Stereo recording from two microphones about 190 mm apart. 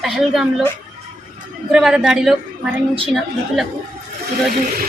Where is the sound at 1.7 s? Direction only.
Centre (ahead or behind).